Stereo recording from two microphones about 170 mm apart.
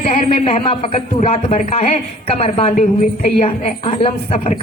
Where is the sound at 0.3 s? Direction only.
35° left (ahead or behind).